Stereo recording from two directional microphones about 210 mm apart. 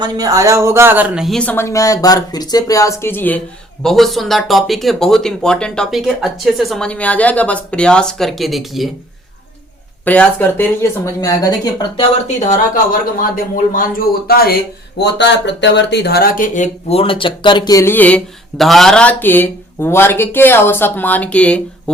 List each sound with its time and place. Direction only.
0.0 s speech: 15° right (ahead or behind); by 8.9 s centre (ahead or behind)
10.0 s speech: 10° left (ahead or behind)
12.5 s speech: 40° left (ahead or behind); by 21.6 s 5° left (ahead or behind)